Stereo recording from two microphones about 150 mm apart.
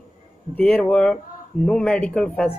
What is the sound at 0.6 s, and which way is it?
Speech, 5° left (ahead or behind).